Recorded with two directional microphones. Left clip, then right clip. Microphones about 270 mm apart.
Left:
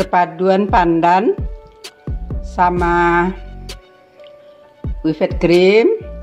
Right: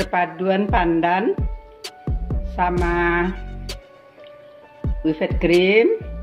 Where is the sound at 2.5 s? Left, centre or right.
Left.